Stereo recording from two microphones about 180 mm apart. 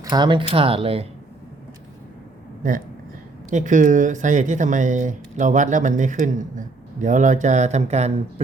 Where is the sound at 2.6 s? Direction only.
50° right (ahead or behind).